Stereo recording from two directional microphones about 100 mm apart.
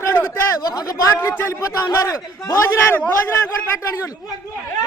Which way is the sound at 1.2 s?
30° left (ahead or behind).